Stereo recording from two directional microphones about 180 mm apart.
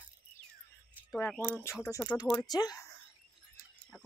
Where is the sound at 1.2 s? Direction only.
10° left (ahead or behind).